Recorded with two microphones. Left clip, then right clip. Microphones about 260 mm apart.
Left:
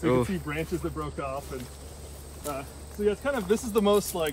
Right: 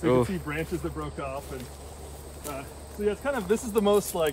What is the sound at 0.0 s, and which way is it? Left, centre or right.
Speech, centre.